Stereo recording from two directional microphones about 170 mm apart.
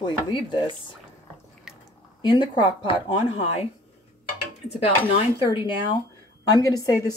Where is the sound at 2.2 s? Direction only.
30° left (ahead or behind).